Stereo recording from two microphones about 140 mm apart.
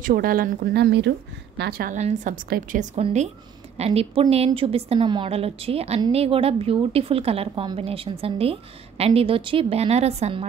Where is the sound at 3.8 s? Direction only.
45° right (ahead or behind).